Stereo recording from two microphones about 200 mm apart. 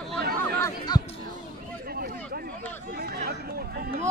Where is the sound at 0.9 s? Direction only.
20° left (ahead or behind).